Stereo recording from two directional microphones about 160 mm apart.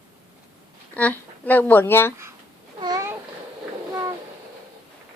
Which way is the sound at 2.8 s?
25° right (ahead or behind).